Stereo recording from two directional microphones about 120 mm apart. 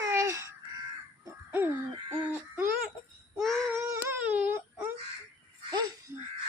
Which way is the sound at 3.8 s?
25° right (ahead or behind).